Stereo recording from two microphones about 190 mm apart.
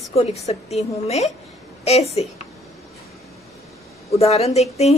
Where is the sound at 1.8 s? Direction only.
35° left (ahead or behind).